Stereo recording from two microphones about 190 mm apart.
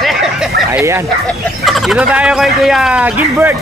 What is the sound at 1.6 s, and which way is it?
Turkey, centre (ahead or behind).